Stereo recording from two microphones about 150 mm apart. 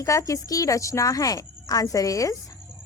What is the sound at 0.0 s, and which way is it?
A woman's voice, 20° left (ahead or behind).